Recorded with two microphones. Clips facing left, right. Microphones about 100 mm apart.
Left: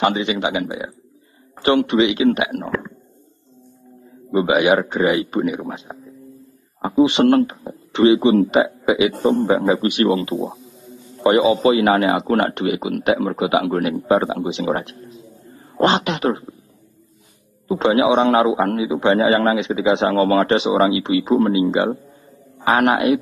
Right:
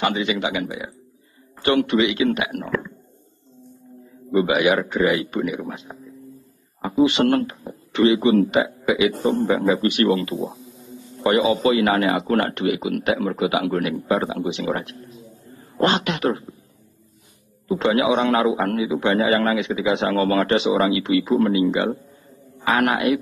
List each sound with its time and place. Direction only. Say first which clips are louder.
0.0 s a man's voice: left 3 dB; 25° left (ahead or behind)
4.3 s a man's voice: left 3 dB; 25° left (ahead or behind)
17.6 s a man's voice: left 3 dB; 25° left (ahead or behind)